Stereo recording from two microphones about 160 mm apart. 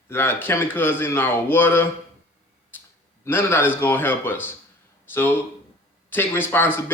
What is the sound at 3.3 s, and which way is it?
A man's voice, 15° left (ahead or behind).